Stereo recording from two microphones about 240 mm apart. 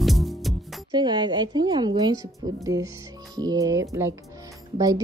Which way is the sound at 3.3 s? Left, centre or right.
Centre.